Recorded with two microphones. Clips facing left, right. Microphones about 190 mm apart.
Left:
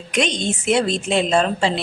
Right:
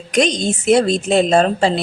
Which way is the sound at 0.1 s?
40° right (ahead or behind).